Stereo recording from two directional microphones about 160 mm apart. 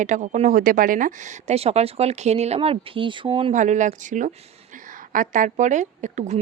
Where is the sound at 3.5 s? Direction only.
50° right (ahead or behind).